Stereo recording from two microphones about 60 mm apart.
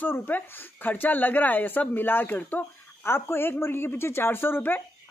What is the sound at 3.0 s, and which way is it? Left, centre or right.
A woman's voice, left.